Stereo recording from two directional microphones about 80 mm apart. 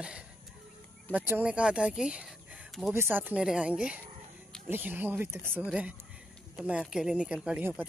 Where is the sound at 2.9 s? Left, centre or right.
Right.